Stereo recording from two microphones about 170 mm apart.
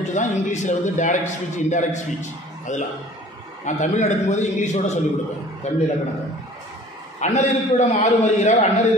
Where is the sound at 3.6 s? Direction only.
45° left (ahead or behind).